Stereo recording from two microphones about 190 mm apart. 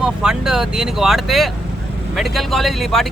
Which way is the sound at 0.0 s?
5° right (ahead or behind).